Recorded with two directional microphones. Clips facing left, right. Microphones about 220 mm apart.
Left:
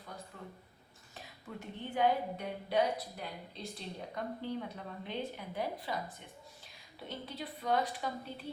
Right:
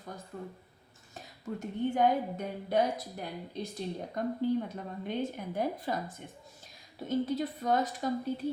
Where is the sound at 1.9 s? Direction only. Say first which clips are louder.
Right 1 dB; 45° right (ahead or behind).